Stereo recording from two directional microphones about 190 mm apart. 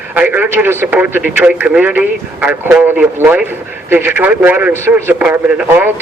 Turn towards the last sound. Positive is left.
turn(degrees=-10)  # may be behind; listen again after turning